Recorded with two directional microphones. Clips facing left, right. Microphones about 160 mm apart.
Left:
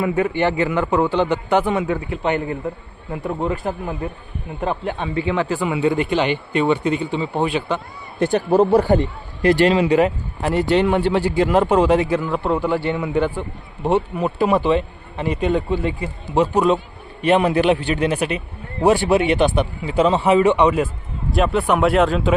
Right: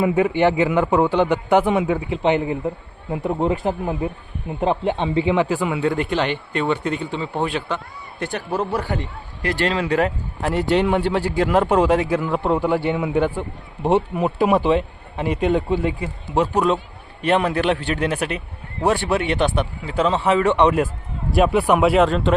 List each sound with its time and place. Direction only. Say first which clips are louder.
0.0 s a man's voice: right 2 dB; 15° right (ahead or behind)
5.6 s speech: left 2 dB; 5° left (ahead or behind)
8.2 s a man's voice: left 9 dB; 25° left (ahead or behind)
9.4 s a man's voice: left 7 dB; 15° left (ahead or behind)
10.5 s speech: left 2 dB; 5° right (ahead or behind)
12.2 s a man's voice: even; 15° right (ahead or behind); by 22.4 s 5° left (ahead or behind)